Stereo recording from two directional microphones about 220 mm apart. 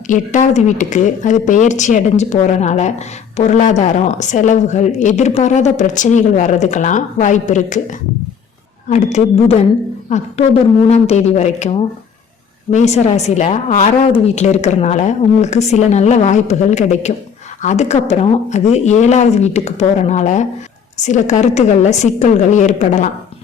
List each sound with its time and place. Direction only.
0.1 s a woman's voice: 35° left (ahead or behind)
8.9 s a woman's voice: 30° left (ahead or behind)